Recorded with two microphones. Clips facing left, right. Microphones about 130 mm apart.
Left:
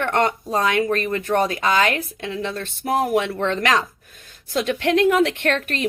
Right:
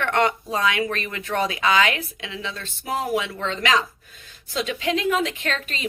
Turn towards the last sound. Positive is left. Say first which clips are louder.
# left 7 dB
turn(degrees=60)  # may be behind; listen again after turning